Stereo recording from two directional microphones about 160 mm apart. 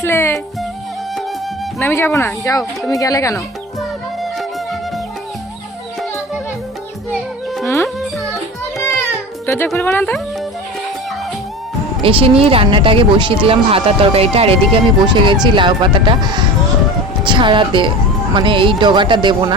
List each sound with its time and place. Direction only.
0.0 s music: 15° left (ahead or behind)
1.8 s speech: 15° left (ahead or behind)
3.3 s music: centre (ahead or behind)
7.6 s music: 20° left (ahead or behind)
8.8 s a sound: 20° left (ahead or behind)
9.7 s speech: 10° left (ahead or behind)
12.0 s speech: 35° right (ahead or behind)